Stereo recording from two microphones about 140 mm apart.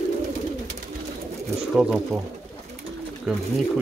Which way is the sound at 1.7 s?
5° right (ahead or behind).